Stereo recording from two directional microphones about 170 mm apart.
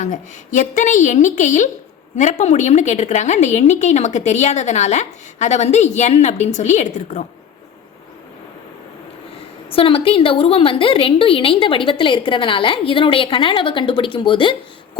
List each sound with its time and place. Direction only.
0.0 s a woman's voice: 45° left (ahead or behind)
9.6 s a woman's voice: 35° left (ahead or behind)